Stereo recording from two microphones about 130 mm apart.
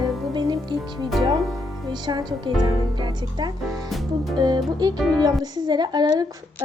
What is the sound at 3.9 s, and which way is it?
Music, centre (ahead or behind).